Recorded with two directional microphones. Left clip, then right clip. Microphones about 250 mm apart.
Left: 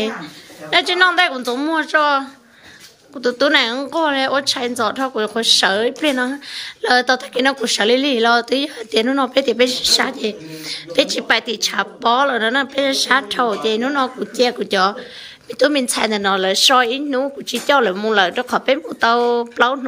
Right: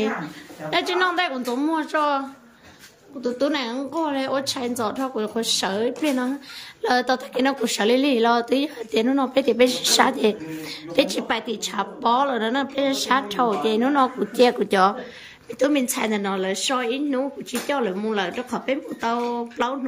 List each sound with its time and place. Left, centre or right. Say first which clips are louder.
0.0 s speech: left 2 dB; centre